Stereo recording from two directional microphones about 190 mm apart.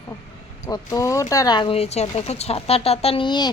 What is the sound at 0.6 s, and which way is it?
Speech, 15° left (ahead or behind).